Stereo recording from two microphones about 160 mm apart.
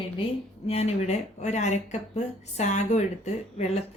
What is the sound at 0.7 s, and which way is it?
Speech, 40° left (ahead or behind).